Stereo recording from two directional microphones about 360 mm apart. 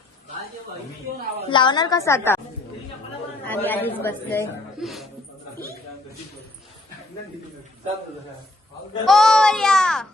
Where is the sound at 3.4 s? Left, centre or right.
Centre.